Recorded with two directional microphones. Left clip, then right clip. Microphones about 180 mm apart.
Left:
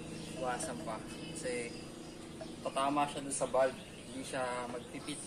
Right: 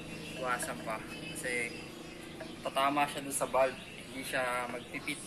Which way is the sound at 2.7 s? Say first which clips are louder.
Right 3 dB; 25° left (ahead or behind).